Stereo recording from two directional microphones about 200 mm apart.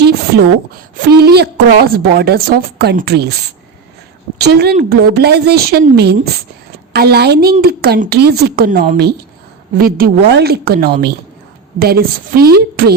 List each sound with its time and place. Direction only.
0.9 s a woman's voice: 55° right (ahead or behind)
4.4 s a woman's voice: 55° right (ahead or behind)